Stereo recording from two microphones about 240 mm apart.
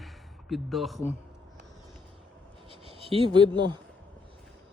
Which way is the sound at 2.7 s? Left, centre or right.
Right.